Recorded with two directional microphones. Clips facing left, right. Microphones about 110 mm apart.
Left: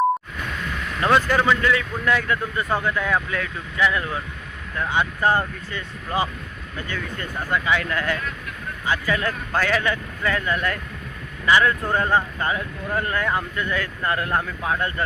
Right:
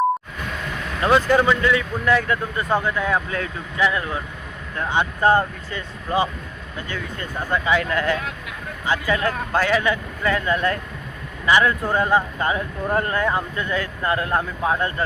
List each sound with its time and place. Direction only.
1.5 s speech: 25° right (ahead or behind)
7.5 s speech: 30° right (ahead or behind)
11.4 s speech: 15° right (ahead or behind)
12.5 s speech: 30° right (ahead or behind)